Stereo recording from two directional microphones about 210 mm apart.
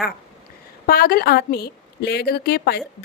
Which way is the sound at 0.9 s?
45° left (ahead or behind).